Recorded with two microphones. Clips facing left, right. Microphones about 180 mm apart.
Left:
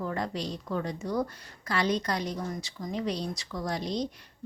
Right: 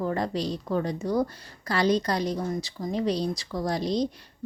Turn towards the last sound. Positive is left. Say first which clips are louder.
# right 5 dB
turn(degrees=-35)  # may be behind; listen again after turning